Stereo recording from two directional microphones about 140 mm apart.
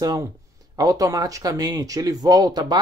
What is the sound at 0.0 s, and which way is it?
Speech, 30° right (ahead or behind).